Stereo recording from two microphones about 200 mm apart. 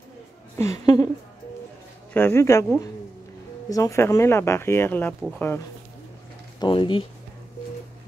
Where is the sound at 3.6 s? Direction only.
15° left (ahead or behind).